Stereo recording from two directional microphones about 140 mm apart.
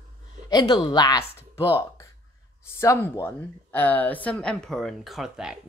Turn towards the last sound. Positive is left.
turn(degrees=-5)  # may be behind; listen again after turning